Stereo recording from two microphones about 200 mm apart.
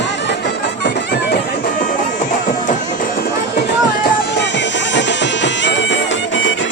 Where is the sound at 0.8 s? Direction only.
60° left (ahead or behind).